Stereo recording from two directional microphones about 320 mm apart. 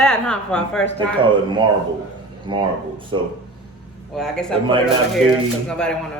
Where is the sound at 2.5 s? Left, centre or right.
Centre.